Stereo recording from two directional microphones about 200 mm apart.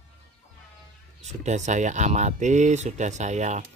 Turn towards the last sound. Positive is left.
turn(degrees=-35)  # may be behind; listen again after turning